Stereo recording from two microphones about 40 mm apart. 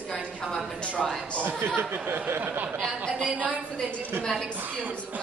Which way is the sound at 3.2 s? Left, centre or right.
Right.